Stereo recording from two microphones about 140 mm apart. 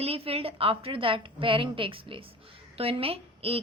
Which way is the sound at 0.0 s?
45° right (ahead or behind).